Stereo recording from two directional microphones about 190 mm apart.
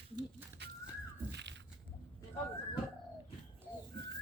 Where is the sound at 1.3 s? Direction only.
65° right (ahead or behind).